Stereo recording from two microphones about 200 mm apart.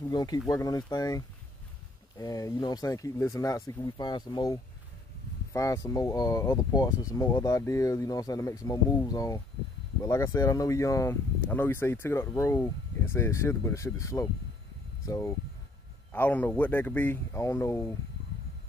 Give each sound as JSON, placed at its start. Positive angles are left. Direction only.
{"t": 0.1, "sound": "speech", "side_deg": 20}